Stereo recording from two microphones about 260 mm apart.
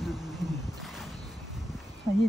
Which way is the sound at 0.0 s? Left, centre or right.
Centre.